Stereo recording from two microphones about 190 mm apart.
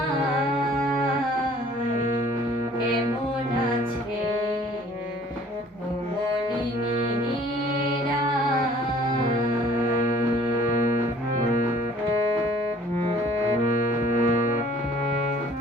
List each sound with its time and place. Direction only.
9.9 s music: 40° left (ahead or behind)
13.7 s music: 45° left (ahead or behind)